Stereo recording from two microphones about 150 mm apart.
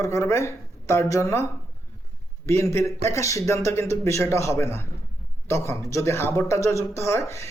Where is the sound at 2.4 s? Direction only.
20° left (ahead or behind).